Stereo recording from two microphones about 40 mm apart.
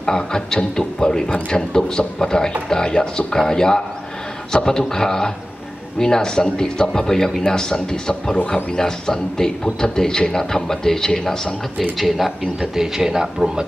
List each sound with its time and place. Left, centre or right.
0.0 s a man's voice: centre
12.7 s speech: centre